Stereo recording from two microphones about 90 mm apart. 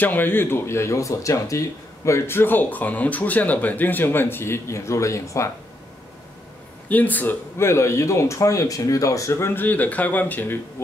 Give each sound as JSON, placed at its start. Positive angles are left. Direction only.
{"t": 0.0, "sound": "speech", "side_deg": 20}
{"t": 6.9, "sound": "speech", "side_deg": 20}